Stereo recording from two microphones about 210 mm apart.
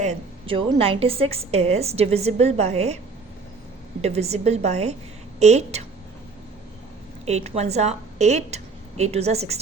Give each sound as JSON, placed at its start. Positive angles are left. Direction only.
{"t": 0.0, "sound": "a woman's voice", "side_deg": -30}
{"t": 4.0, "sound": "a woman's voice", "side_deg": -30}
{"t": 7.3, "sound": "a woman's voice", "side_deg": -30}